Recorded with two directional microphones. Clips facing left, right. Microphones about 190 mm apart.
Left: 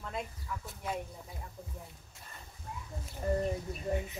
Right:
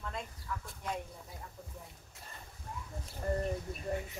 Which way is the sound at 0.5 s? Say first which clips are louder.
Even; 10° left (ahead or behind).